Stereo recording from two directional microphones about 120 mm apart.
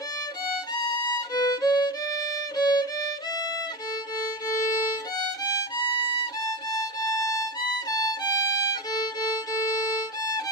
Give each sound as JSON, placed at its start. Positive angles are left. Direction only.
{"t": 1.0, "sound": "violin", "side_deg": 35}
{"t": 5.8, "sound": "violin", "side_deg": 40}
{"t": 6.4, "sound": "music", "side_deg": 30}